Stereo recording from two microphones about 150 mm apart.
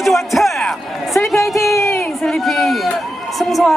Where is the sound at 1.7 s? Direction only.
20° left (ahead or behind).